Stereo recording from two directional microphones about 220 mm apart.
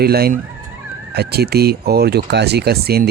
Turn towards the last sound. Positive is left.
turn(degrees=-45)  # may be behind; listen again after turning